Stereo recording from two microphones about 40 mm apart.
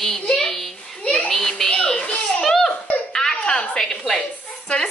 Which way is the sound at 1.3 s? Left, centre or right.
Centre.